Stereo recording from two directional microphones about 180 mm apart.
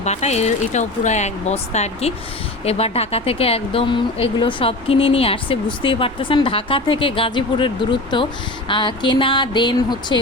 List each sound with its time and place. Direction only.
0.0 s speech: 40° left (ahead or behind)